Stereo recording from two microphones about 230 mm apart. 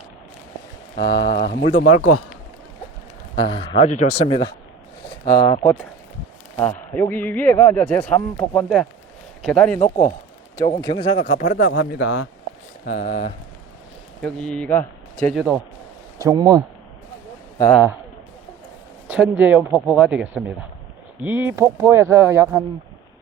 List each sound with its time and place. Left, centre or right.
0.9 s speech: left
1.6 s speech: left
3.3 s a man's voice: centre
10.6 s speech: centre; by 12.3 s left
12.8 s speech: left
14.2 s speech: centre
16.2 s speech: centre
19.0 s a sound: centre
19.4 s speech: centre